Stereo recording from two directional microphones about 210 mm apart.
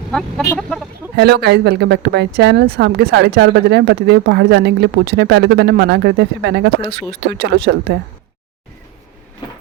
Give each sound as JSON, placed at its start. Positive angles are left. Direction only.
{"t": 0.1, "sound": "speech", "side_deg": 0}
{"t": 1.1, "sound": "speech", "side_deg": -50}